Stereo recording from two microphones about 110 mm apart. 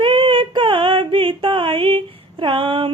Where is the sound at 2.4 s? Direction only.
50° right (ahead or behind).